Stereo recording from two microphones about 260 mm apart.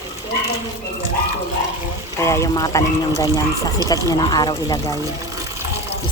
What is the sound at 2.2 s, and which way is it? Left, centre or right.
Speech, centre.